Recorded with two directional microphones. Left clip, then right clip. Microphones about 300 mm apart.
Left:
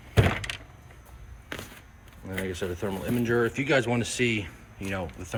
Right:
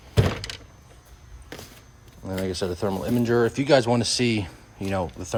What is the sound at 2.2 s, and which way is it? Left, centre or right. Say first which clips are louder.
Speech: right 4 dB; centre.